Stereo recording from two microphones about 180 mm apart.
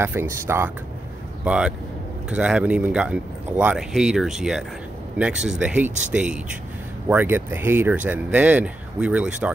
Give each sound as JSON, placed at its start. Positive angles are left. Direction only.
{"t": 0.0, "sound": "a man's voice", "side_deg": -15}